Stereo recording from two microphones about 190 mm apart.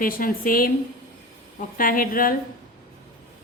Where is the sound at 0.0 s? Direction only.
45° left (ahead or behind).